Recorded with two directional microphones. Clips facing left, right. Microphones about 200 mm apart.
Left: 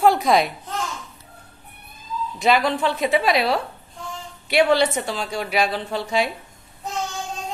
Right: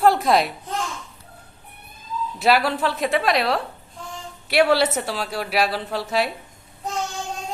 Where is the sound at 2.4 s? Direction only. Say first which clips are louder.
Even; 5° right (ahead or behind).